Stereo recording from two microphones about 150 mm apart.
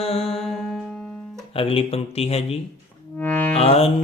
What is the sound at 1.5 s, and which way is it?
Music, 35° left (ahead or behind).